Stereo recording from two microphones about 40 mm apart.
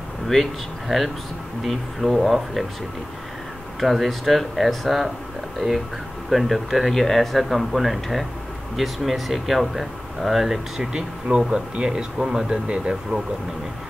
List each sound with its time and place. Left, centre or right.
0.3 s speech: centre
3.8 s speech: centre
5.6 s speech: right
6.3 s speech: centre
10.8 s speech: right